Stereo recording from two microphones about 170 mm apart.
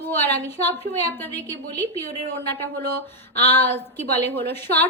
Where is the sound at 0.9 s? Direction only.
75° right (ahead or behind).